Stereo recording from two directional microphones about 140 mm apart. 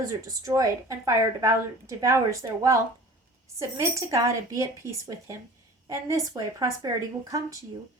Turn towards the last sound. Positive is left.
turn(degrees=-25)  # may be behind; listen again after turning